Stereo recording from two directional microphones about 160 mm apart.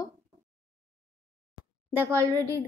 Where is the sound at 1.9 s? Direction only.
15° right (ahead or behind).